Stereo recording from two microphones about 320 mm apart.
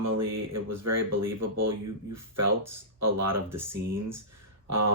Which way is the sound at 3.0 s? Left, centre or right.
Right.